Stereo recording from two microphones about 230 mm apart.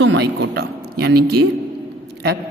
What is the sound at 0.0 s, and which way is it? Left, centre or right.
Speech, right.